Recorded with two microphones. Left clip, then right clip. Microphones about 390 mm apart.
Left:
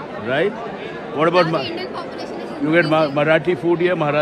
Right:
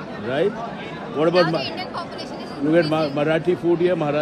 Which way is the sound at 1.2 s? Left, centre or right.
Centre.